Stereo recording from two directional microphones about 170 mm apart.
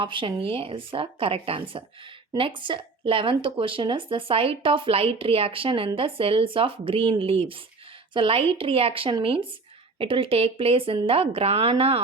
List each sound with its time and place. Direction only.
0.0 s speech: 30° right (ahead or behind)